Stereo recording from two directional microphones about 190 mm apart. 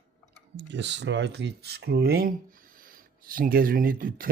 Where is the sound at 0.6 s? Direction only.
70° right (ahead or behind); by 4.2 s 50° right (ahead or behind).